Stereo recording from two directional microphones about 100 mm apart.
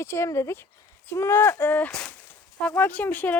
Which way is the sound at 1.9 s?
10° left (ahead or behind).